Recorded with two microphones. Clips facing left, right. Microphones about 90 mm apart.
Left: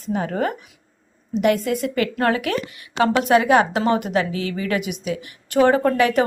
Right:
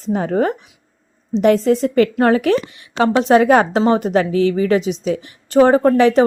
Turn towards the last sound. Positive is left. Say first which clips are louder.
# right 6 dB
turn(degrees=-30)  # may be behind; listen again after turning